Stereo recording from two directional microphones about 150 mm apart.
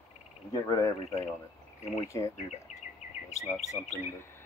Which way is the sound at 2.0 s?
20° left (ahead or behind).